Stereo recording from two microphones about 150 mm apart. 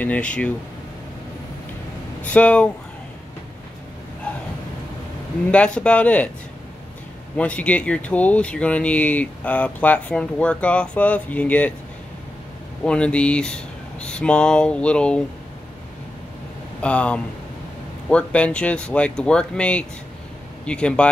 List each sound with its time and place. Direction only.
0.0 s speech: 10° left (ahead or behind)
2.2 s speech: 10° left (ahead or behind)
5.5 s speech: 10° left (ahead or behind)
7.3 s speech: 10° left (ahead or behind)
12.8 s speech: 5° left (ahead or behind)
16.8 s speech: 10° left (ahead or behind)